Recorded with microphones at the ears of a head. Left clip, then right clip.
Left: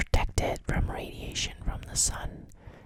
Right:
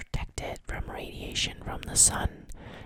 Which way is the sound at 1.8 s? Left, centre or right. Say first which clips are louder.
Right 5 dB; right.